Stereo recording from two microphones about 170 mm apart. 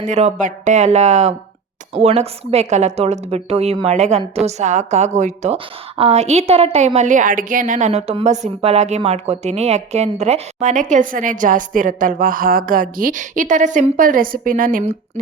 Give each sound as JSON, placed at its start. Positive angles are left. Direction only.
{"t": 0.0, "sound": "a woman's voice", "side_deg": -40}